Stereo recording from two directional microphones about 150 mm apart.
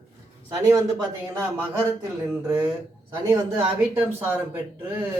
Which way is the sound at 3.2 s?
20° right (ahead or behind).